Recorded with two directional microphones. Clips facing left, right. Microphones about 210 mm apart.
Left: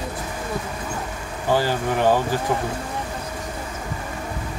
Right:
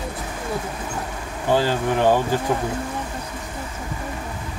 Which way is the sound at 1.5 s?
20° right (ahead or behind).